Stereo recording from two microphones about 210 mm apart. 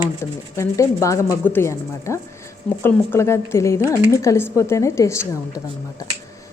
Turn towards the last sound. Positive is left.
turn(degrees=15)  # may be behind; listen again after turning